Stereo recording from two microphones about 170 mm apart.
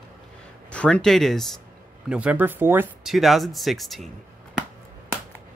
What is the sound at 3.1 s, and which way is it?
Speech, centre (ahead or behind).